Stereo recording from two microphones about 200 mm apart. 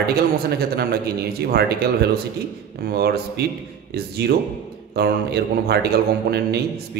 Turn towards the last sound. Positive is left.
turn(degrees=-55)  # may be behind; listen again after turning